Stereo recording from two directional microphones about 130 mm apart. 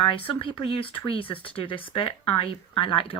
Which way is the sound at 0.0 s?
45° left (ahead or behind).